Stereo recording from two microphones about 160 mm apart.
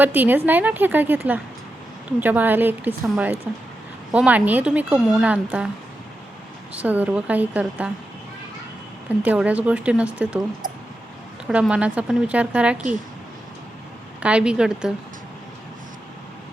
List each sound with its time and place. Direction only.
0.0 s speech: 10° right (ahead or behind)
6.7 s speech: 10° right (ahead or behind)
9.0 s speech: 10° right (ahead or behind)
11.4 s speech: 5° right (ahead or behind)
14.2 s a woman's voice: 5° right (ahead or behind)